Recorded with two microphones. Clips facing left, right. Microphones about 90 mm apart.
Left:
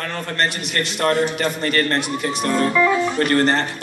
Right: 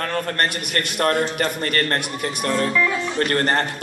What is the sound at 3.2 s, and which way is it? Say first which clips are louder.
Speech: right 1 dB; 40° right (ahead or behind).